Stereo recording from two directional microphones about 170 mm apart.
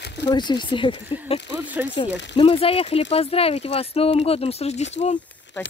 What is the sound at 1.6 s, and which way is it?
Speech, 10° right (ahead or behind).